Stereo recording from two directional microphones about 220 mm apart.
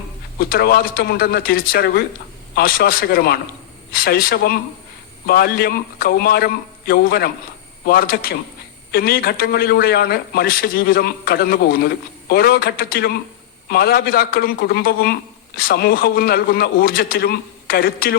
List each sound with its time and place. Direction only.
0.3 s speech: 45° left (ahead or behind)